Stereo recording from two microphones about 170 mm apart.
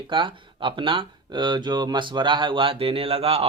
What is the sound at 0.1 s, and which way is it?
Speech, 30° right (ahead or behind).